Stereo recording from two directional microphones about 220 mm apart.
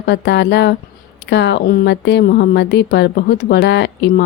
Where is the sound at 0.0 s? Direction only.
50° left (ahead or behind).